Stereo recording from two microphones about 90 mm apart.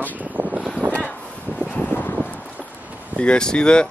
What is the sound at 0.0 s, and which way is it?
Vehicle, 20° right (ahead or behind).